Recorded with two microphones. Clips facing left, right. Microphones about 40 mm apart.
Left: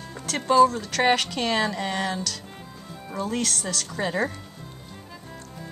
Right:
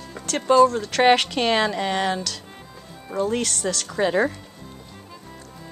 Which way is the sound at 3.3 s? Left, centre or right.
Centre.